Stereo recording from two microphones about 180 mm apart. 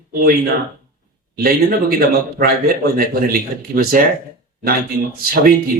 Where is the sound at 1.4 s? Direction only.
55° right (ahead or behind).